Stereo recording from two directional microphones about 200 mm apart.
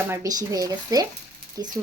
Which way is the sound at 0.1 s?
15° right (ahead or behind).